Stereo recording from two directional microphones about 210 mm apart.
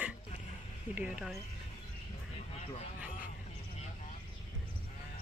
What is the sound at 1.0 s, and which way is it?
Speech, 5° right (ahead or behind).